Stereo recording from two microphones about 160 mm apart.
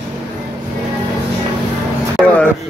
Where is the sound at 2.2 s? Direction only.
15° right (ahead or behind).